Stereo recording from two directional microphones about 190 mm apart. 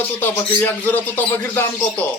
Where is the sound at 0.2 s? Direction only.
10° left (ahead or behind).